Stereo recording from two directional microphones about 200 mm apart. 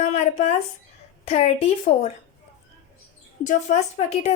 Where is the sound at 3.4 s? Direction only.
35° left (ahead or behind).